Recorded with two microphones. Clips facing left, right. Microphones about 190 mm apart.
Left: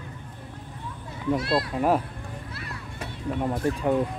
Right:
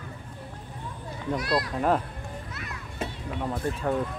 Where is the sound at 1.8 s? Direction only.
10° left (ahead or behind).